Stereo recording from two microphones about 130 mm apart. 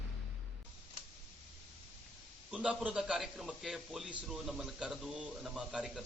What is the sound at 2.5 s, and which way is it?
A man's voice, 10° right (ahead or behind).